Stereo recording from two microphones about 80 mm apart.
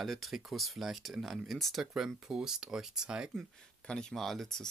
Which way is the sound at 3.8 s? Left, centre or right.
Centre.